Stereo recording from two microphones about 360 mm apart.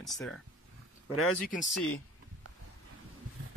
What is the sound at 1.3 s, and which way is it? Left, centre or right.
Speech, left.